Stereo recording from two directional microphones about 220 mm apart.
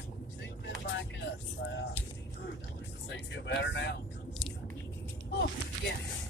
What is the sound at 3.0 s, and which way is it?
Speech, 55° left (ahead or behind).